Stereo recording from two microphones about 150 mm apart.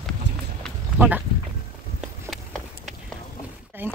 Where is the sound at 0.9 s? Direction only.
10° right (ahead or behind).